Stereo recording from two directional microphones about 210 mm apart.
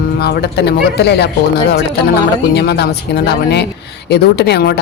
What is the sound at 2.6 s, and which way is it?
Speech, 50° left (ahead or behind).